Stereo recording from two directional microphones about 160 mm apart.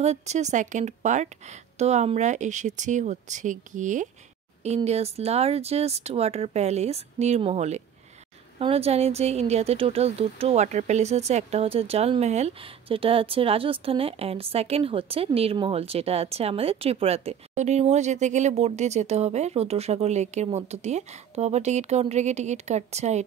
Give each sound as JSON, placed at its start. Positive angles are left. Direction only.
{"t": 0.0, "sound": "a woman's voice", "side_deg": -45}
{"t": 4.6, "sound": "speech", "side_deg": -40}